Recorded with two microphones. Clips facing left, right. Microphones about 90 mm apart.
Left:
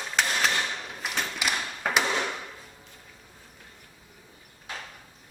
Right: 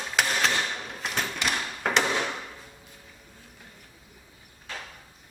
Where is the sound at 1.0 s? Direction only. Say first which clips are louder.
Right 1 dB; 5° left (ahead or behind).